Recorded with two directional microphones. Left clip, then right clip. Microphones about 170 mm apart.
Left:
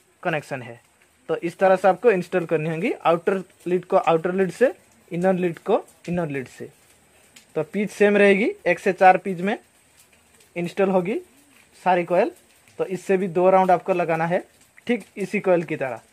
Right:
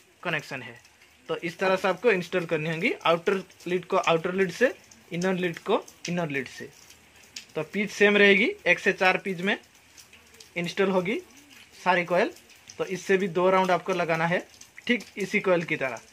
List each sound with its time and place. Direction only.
0.2 s speech: 70° left (ahead or behind)
7.5 s speech: 65° left (ahead or behind)